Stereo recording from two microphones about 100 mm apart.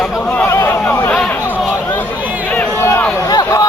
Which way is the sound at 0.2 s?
15° left (ahead or behind).